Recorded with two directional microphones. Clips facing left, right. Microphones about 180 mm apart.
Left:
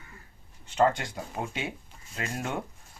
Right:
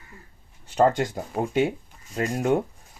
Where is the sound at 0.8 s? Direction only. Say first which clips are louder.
Right 4 dB; 45° right (ahead or behind).